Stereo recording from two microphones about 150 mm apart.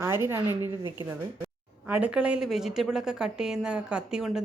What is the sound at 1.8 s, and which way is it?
A woman's voice, 10° right (ahead or behind).